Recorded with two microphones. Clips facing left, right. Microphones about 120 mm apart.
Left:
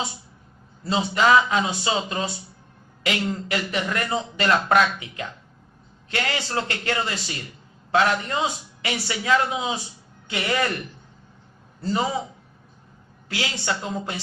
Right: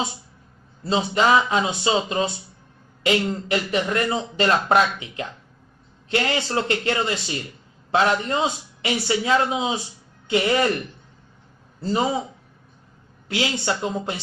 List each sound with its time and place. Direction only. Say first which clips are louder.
0.9 s speech: even; 25° right (ahead or behind)
11.8 s speech: right 2 dB; 25° right (ahead or behind)
13.2 s speech: right 4 dB; 25° right (ahead or behind)